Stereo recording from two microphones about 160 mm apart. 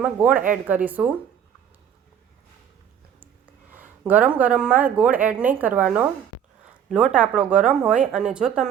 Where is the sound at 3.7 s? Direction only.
10° right (ahead or behind).